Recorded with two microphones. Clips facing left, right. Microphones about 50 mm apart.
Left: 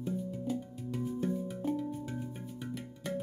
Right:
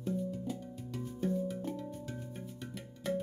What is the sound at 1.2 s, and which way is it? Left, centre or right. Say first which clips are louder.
Music: right 4 dB; centre.